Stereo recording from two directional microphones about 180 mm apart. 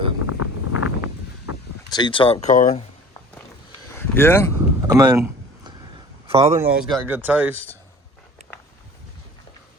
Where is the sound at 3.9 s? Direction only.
10° left (ahead or behind).